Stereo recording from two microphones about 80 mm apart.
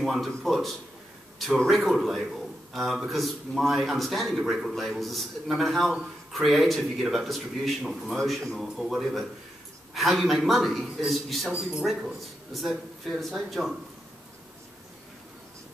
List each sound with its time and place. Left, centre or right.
0.0 s a man's voice: centre
8.2 s a man's voice: centre